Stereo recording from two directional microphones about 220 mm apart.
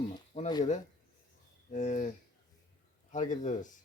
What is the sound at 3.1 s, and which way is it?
Speech, 35° left (ahead or behind).